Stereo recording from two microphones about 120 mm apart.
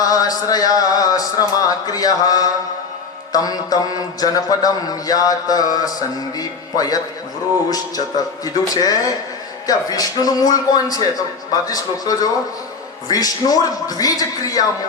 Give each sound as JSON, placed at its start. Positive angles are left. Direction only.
{"t": 0.0, "sound": "speech", "side_deg": 30}
{"t": 3.3, "sound": "mantra", "side_deg": 30}